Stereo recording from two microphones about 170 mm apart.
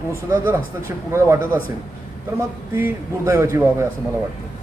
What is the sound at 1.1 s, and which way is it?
Speech, 15° right (ahead or behind).